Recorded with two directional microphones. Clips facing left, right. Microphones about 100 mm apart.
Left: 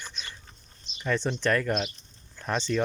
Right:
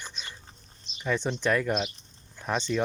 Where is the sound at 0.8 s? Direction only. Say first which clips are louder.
Left 1 dB; 5° right (ahead or behind).